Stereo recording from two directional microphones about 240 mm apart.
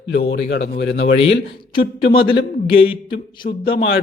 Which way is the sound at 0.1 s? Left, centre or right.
Left.